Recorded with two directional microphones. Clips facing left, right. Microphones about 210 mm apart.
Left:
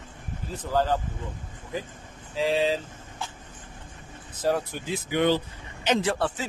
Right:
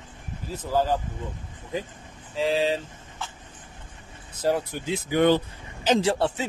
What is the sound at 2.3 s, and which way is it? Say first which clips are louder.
Speech: even; centre (ahead or behind).